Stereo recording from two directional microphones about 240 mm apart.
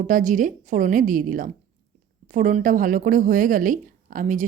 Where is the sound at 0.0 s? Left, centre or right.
Right.